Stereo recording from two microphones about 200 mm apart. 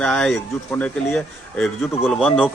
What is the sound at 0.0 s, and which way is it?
Speech, 5° left (ahead or behind).